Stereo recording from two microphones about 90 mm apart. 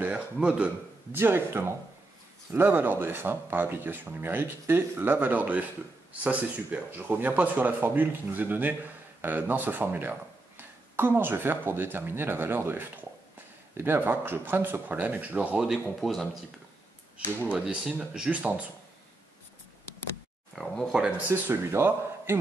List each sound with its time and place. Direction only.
0.0 s speech: 15° right (ahead or behind)
1.1 s speech: 25° right (ahead or behind)
15.7 s speech: centre (ahead or behind)
17.5 s speech: 10° right (ahead or behind)
20.5 s speech: 5° left (ahead or behind)
21.3 s speech: 25° right (ahead or behind)